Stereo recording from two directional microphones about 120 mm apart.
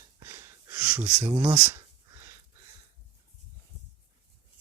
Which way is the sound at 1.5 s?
25° right (ahead or behind).